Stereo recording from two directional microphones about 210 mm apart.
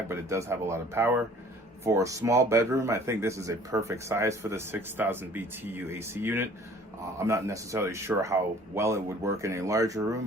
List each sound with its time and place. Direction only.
0.1 s speech: 15° right (ahead or behind)